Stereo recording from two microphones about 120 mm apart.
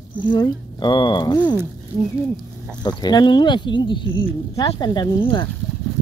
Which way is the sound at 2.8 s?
35° left (ahead or behind).